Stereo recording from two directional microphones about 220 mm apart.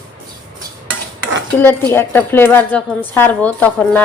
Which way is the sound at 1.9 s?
10° left (ahead or behind).